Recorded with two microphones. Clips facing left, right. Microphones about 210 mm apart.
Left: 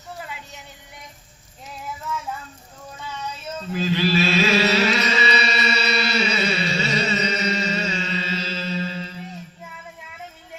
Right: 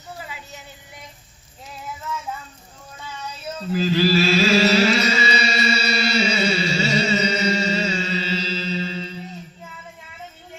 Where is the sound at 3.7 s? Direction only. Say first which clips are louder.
Right 3 dB; 40° right (ahead or behind).